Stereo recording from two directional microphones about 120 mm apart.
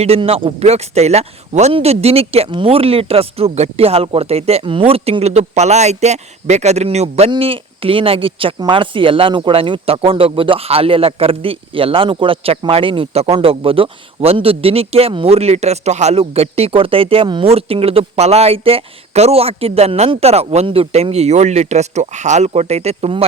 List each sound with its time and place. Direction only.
0.0 s speech: 55° right (ahead or behind)
7.3 s speech: 50° right (ahead or behind)